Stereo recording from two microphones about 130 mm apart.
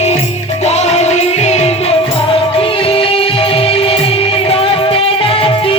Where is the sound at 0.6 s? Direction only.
55° left (ahead or behind).